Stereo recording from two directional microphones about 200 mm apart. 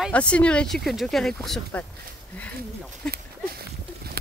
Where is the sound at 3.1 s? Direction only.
50° right (ahead or behind).